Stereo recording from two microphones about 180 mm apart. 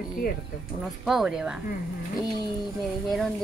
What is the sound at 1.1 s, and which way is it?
Speech, centre (ahead or behind).